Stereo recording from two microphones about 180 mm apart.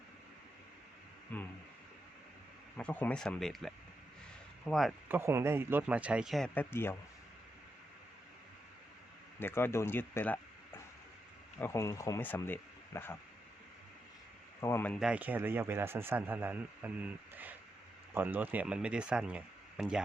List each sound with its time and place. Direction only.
1.3 s speech: 10° left (ahead or behind)
2.7 s speech: 10° left (ahead or behind)
4.7 s speech: centre (ahead or behind)
5.0 s a man's voice: 10° right (ahead or behind); by 6.9 s 15° left (ahead or behind)
9.4 s speech: 10° left (ahead or behind)
14.6 s speech: 15° left (ahead or behind)
14.9 s a man's voice: 5° right (ahead or behind)